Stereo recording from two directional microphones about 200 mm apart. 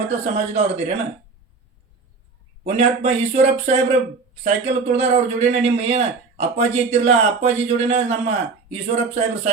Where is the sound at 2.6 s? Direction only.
30° right (ahead or behind).